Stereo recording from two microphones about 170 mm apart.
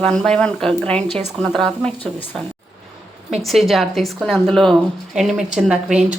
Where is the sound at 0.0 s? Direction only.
5° left (ahead or behind).